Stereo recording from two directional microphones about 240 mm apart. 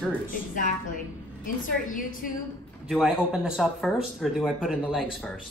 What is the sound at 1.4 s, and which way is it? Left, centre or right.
Speech, left.